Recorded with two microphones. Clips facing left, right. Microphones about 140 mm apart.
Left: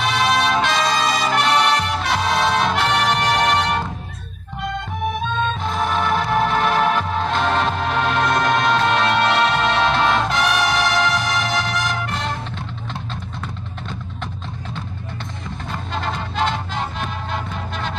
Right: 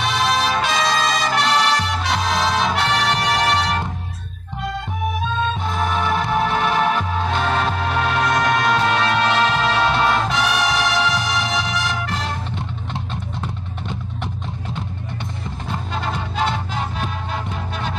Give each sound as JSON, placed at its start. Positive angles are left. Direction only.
{"t": 0.0, "sound": "music", "side_deg": 0}
{"t": 5.7, "sound": "music", "side_deg": -5}
{"t": 12.9, "sound": "music", "side_deg": -15}
{"t": 15.9, "sound": "music", "side_deg": -5}